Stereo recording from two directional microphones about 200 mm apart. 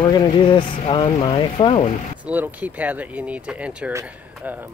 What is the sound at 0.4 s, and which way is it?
Speech, 25° left (ahead or behind).